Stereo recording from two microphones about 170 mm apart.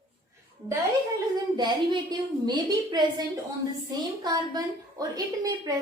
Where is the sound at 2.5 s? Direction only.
25° right (ahead or behind).